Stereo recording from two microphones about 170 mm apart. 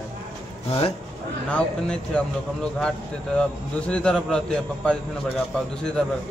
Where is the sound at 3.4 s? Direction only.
5° left (ahead or behind).